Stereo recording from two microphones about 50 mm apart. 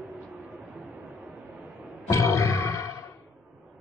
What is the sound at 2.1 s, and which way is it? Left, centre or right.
Roar, left.